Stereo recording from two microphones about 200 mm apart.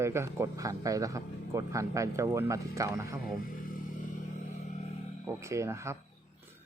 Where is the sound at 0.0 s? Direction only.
15° right (ahead or behind).